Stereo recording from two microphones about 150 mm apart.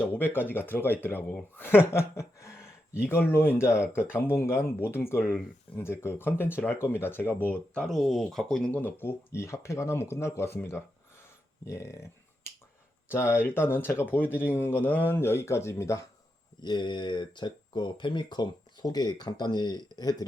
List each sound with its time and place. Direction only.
0.0 s speech: 10° left (ahead or behind)
11.6 s finger snapping: 20° left (ahead or behind)
13.1 s speech: 15° left (ahead or behind)